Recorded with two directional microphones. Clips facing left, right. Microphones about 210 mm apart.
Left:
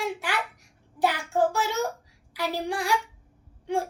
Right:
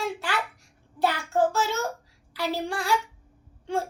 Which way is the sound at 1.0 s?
15° left (ahead or behind).